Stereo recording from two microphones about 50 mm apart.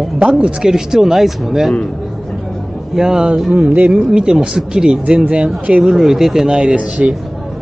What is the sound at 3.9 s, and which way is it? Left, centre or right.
Speech, centre.